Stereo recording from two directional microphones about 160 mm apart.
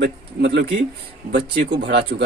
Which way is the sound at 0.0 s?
90° right.